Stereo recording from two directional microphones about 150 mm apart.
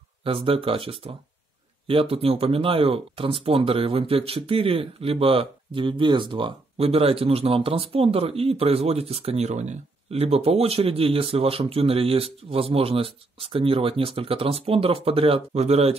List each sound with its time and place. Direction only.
0.2 s speech: 40° right (ahead or behind)